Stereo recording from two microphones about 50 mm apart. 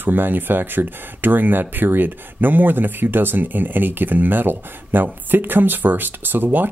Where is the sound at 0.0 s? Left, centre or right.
Right.